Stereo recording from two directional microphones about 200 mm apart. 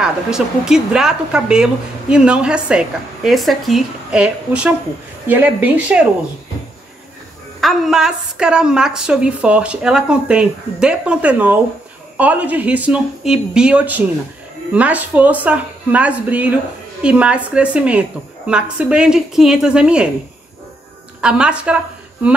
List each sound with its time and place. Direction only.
0.0 s speech: 5° right (ahead or behind)
7.6 s speech: centre (ahead or behind)
21.2 s speech: 5° right (ahead or behind)